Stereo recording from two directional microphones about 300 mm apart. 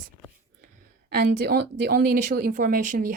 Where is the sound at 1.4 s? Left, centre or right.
Right.